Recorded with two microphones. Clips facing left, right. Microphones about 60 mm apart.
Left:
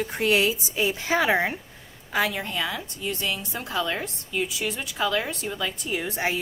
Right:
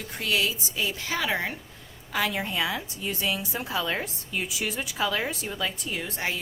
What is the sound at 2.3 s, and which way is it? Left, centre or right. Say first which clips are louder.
A woman's voice: right 1 dB; centre.